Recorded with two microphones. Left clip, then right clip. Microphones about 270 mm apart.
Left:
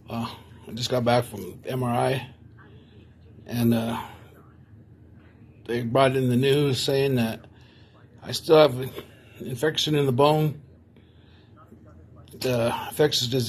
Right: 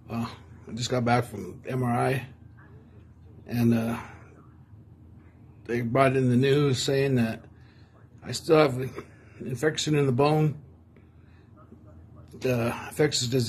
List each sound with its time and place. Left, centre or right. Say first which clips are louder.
0.1 s speech: left 2 dB; centre
3.4 s speech: left 1 dB; centre
5.7 s speech: left 2 dB; centre
8.5 s speech: left 4 dB; centre
12.4 s speech: left 3 dB; centre